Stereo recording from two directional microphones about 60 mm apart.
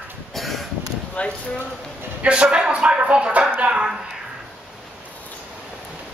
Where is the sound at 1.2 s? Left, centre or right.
Left.